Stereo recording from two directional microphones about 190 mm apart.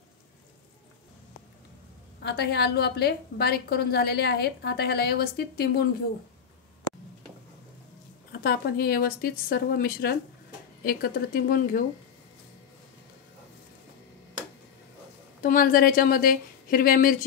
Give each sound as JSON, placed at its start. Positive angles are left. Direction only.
{"t": 2.2, "sound": "a woman's voice", "side_deg": 60}
{"t": 8.3, "sound": "a woman's voice", "side_deg": 55}
{"t": 15.4, "sound": "a woman's voice", "side_deg": 50}